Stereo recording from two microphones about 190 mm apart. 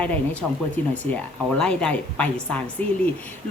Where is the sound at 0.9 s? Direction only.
5° left (ahead or behind).